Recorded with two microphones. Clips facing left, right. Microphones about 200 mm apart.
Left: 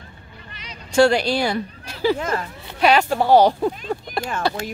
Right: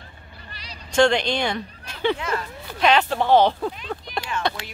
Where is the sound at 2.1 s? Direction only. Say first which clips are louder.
Left 3 dB; 40° left (ahead or behind).